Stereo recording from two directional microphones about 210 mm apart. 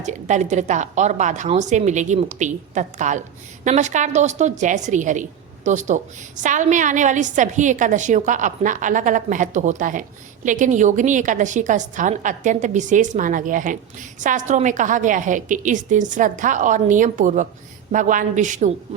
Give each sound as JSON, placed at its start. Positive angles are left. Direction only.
{"t": 0.0, "sound": "a woman's voice", "side_deg": -35}